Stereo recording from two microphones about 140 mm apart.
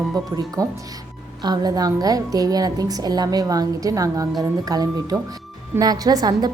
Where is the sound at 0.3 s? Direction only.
25° right (ahead or behind).